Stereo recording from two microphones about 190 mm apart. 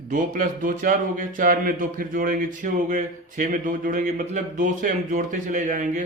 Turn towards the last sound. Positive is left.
turn(degrees=-40)  # may be behind; listen again after turning